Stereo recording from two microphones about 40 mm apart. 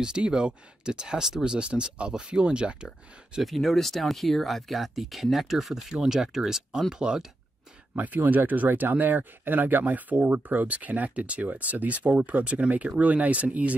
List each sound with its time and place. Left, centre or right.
0.0 s speech: right
3.4 s speech: centre
5.9 s speech: centre
7.9 s speech: right